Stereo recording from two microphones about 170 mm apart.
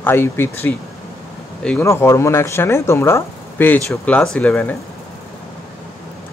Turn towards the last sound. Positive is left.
turn(degrees=10)  # may be behind; listen again after turning